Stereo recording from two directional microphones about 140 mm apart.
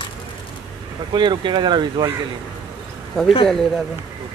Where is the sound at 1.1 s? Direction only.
35° right (ahead or behind).